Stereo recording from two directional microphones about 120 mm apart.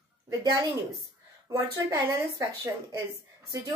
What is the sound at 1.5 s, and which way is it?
Speech, 30° right (ahead or behind).